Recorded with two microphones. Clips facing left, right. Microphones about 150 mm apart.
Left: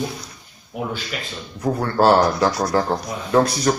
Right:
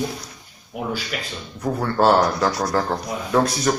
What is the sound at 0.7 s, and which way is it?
Speech, 5° right (ahead or behind).